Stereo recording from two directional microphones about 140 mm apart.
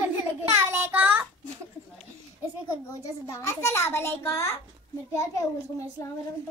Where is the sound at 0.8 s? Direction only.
15° right (ahead or behind).